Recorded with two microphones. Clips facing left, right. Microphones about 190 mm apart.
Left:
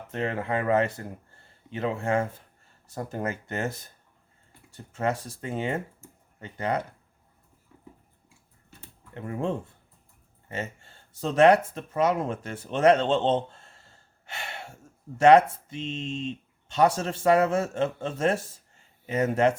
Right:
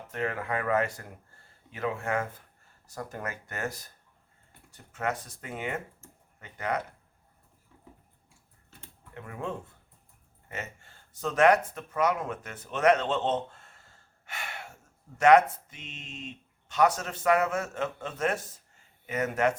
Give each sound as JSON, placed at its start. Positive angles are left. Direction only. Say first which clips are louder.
{"t": 0.1, "sound": "speech", "louder": "left 3 dB", "side_deg": 25}
{"t": 9.1, "sound": "speech", "louder": "left 7 dB", "side_deg": 30}